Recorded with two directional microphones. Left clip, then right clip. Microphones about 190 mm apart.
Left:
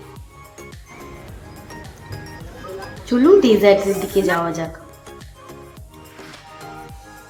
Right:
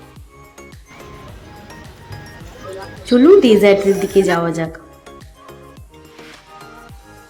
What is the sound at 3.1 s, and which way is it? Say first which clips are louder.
A woman's voice: right 3 dB; 20° right (ahead or behind).